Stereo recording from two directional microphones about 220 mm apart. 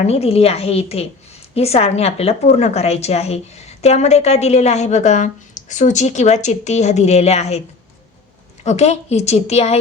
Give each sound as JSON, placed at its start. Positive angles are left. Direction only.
{"t": 0.0, "sound": "a woman's voice", "side_deg": 30}
{"t": 8.6, "sound": "a woman's voice", "side_deg": 30}